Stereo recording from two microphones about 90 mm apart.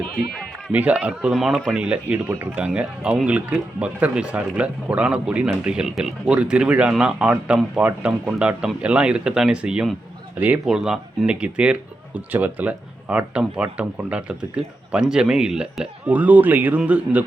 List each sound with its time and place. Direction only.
0.7 s speech: 15° right (ahead or behind)
1.3 s speech: centre (ahead or behind)
1.6 s speech: 10° right (ahead or behind)